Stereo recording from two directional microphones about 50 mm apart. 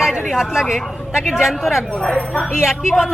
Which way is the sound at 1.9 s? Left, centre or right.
Left.